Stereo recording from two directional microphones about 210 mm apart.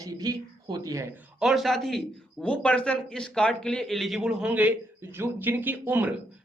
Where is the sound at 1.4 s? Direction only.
Centre (ahead or behind).